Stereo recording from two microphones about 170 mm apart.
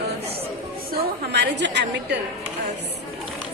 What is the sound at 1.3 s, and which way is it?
Speech, 90° right.